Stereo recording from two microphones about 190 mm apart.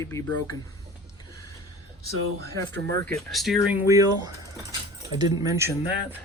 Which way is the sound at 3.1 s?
Centre (ahead or behind).